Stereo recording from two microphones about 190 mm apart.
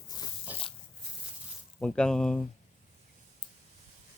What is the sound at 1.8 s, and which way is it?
Speech, 5° left (ahead or behind).